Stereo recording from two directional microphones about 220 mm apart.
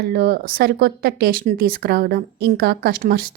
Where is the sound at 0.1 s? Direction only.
45° right (ahead or behind).